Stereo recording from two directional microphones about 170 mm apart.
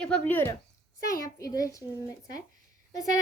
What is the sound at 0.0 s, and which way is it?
A child's voice, 5° left (ahead or behind).